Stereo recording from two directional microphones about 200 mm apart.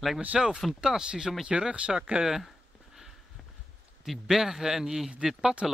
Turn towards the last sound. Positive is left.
turn(degrees=0)  # may be behind; listen again after turning